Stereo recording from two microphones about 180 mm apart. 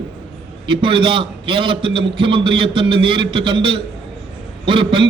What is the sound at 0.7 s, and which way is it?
A man's voice, 30° right (ahead or behind).